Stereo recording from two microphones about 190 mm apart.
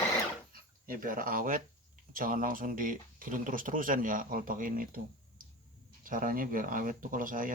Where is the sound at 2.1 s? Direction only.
45° right (ahead or behind).